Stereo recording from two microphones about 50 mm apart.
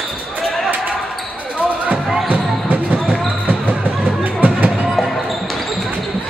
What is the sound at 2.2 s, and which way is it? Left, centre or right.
Basketball bounce, right.